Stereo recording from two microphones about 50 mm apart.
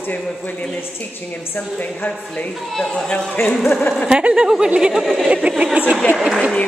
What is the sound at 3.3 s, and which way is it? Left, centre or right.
Speech, left.